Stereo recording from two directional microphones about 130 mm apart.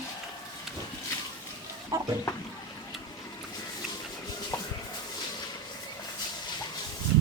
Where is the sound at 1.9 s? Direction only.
25° right (ahead or behind).